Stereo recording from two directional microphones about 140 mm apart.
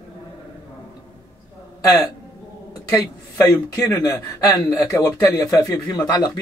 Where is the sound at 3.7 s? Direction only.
20° left (ahead or behind).